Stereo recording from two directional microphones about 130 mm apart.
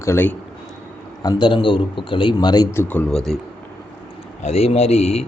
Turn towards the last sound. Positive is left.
turn(degrees=55)  # may be behind; listen again after turning